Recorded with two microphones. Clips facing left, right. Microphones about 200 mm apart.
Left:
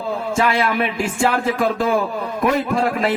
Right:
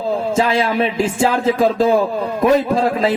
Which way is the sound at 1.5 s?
25° right (ahead or behind).